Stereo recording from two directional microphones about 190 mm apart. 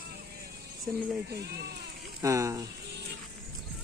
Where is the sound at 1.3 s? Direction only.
60° right (ahead or behind).